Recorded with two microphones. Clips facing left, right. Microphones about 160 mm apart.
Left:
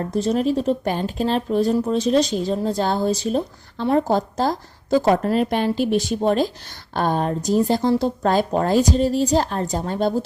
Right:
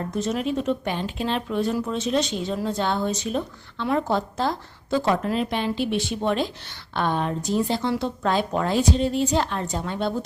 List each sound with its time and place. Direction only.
0.1 s speech: 35° left (ahead or behind)